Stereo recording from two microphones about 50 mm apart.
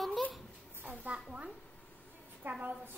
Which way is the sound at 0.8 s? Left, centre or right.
Right.